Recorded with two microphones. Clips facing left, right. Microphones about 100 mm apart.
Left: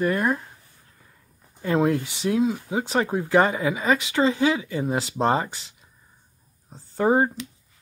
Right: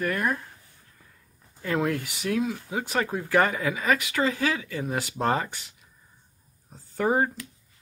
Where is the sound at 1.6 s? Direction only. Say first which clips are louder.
Left 5 dB; 25° left (ahead or behind).